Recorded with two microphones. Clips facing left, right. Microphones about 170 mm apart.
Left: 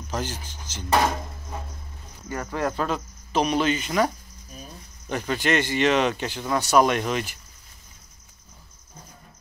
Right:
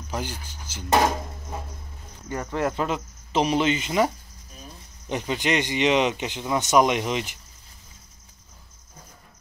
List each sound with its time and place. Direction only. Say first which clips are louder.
0.1 s speech: left 1 dB; 10° right (ahead or behind)
2.3 s speech: right 1 dB; 15° right (ahead or behind)